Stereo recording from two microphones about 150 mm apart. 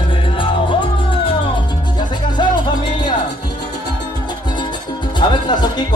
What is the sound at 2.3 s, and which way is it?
Music, 30° left (ahead or behind).